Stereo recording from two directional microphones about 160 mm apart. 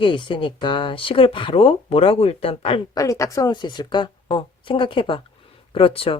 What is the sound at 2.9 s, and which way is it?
Speech, 20° left (ahead or behind).